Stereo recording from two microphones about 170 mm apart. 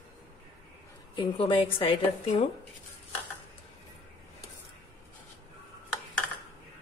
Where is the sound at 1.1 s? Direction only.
30° left (ahead or behind).